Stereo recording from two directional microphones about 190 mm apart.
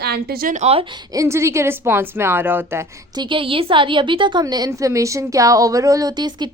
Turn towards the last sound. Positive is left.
turn(degrees=-20)  # may be behind; listen again after turning